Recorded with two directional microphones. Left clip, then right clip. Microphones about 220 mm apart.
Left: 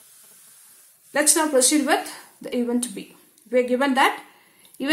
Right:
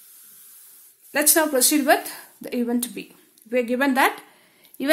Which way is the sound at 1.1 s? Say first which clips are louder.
Left 1 dB; 40° right (ahead or behind).